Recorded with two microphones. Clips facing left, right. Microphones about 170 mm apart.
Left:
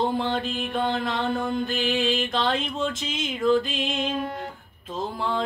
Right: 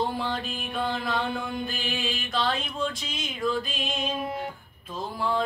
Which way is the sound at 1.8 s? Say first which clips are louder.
Left 8 dB; 90° left.